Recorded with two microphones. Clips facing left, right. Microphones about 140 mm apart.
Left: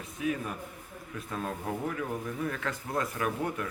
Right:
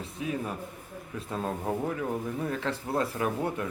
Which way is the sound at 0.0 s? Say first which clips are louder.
Even; 30° right (ahead or behind).